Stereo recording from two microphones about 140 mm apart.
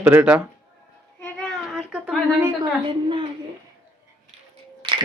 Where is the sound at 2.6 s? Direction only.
40° right (ahead or behind).